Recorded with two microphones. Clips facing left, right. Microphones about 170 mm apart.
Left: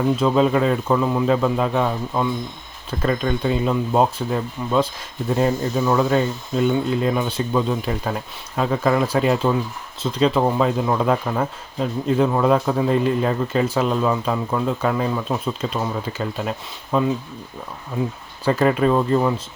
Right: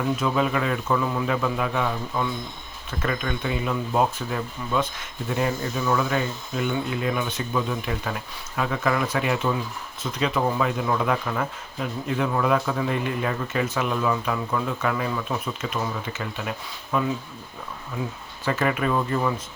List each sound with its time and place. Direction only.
0.2 s speech: 30° left (ahead or behind)
18.4 s speech: 30° left (ahead or behind)